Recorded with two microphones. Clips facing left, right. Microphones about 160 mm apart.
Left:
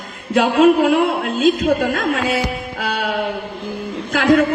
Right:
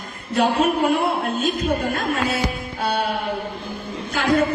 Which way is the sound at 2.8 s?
90° left.